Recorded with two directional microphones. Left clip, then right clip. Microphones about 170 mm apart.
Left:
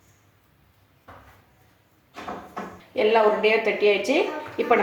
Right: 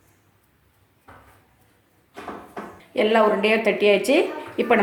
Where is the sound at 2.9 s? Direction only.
75° right (ahead or behind).